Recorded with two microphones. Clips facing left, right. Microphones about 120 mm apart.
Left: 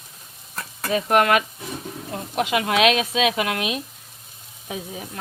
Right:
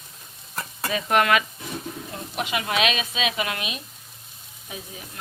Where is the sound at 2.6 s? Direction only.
70° left (ahead or behind).